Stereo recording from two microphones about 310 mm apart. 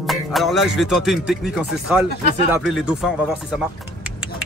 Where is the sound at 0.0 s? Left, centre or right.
Centre.